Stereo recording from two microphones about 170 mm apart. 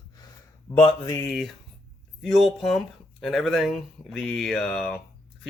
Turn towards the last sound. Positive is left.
turn(degrees=0)  # may be behind; listen again after turning